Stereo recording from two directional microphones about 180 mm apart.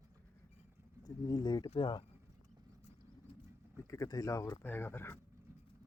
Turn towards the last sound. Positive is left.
turn(degrees=10)  # may be behind; listen again after turning